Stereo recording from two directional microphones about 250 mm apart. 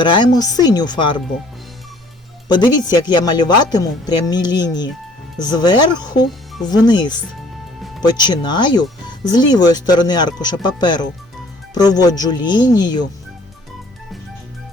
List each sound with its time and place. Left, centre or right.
0.0 s speech: centre
2.5 s speech: centre